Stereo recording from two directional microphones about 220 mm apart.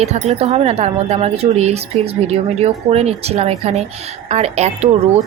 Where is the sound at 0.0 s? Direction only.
30° right (ahead or behind).